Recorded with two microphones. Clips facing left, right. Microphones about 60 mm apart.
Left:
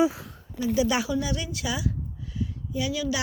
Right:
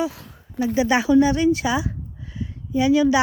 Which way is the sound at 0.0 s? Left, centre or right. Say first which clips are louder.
Left 2 dB; centre.